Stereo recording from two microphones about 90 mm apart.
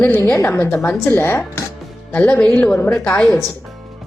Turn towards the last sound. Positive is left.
turn(degrees=10)  # may be behind; listen again after turning